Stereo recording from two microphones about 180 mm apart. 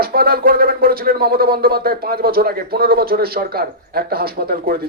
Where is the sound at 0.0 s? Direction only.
55° right (ahead or behind).